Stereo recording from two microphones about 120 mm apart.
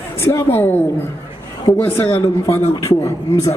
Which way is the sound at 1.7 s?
90° left.